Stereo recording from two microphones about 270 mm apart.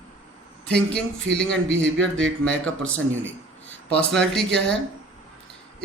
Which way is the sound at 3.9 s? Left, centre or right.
Centre.